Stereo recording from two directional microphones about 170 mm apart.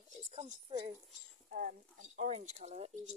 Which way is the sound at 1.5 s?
50° right (ahead or behind).